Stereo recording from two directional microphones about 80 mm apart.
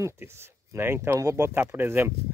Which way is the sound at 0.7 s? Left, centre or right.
Right.